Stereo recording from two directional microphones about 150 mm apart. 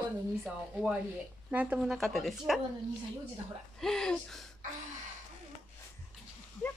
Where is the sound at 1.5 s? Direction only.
10° right (ahead or behind).